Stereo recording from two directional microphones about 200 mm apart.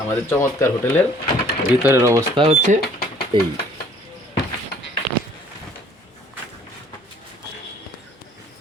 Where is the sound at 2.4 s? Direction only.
35° right (ahead or behind).